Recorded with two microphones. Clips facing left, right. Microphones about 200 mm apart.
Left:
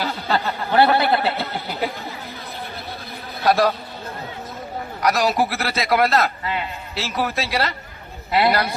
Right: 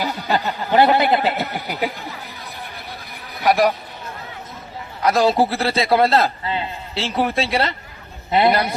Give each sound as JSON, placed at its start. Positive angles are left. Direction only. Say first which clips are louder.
{"t": 0.0, "sound": "a sound", "louder": "right 1 dB", "side_deg": -15}
{"t": 3.4, "sound": "a man's voice", "louder": "right 1 dB", "side_deg": -15}
{"t": 5.0, "sound": "a man's voice", "louder": "right 3 dB", "side_deg": -25}